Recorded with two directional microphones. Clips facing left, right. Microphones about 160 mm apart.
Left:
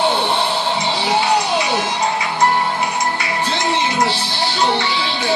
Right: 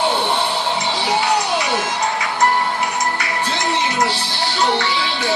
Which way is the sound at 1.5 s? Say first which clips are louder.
Left 1 dB; 15° left (ahead or behind).